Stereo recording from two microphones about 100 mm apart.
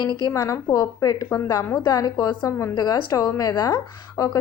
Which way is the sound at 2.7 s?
40° left (ahead or behind).